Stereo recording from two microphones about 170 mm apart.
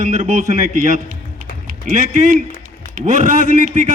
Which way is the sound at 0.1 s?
45° right (ahead or behind).